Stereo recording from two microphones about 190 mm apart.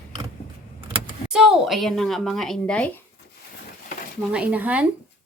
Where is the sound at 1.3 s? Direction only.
Centre (ahead or behind).